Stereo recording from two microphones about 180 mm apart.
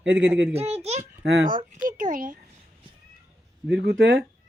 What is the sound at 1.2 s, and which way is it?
Speech, 65° right (ahead or behind).